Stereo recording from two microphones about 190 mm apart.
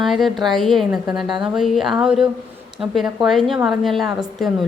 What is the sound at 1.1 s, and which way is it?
Speech, 25° right (ahead or behind).